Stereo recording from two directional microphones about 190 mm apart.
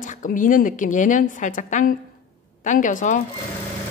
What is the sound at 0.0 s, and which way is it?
A woman's voice, 45° left (ahead or behind).